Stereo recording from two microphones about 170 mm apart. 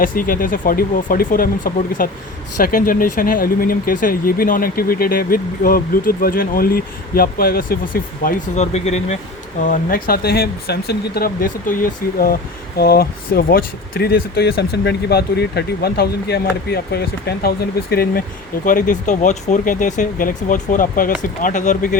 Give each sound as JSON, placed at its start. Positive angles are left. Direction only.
{"t": 0.0, "sound": "speech", "side_deg": 55}
{"t": 9.6, "sound": "speech", "side_deg": 60}
{"t": 18.6, "sound": "speech", "side_deg": 55}